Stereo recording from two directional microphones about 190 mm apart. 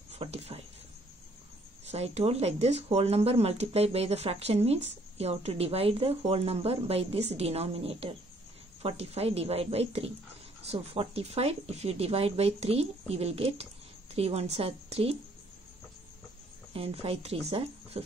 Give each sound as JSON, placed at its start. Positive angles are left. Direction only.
{"t": 0.1, "sound": "a sound", "side_deg": -35}
{"t": 1.9, "sound": "speech", "side_deg": -35}
{"t": 16.7, "sound": "speech", "side_deg": -30}